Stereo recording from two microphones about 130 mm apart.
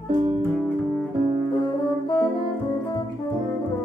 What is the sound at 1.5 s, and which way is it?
Music, 40° left (ahead or behind).